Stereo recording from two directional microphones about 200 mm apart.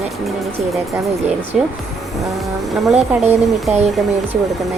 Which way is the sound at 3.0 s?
35° right (ahead or behind).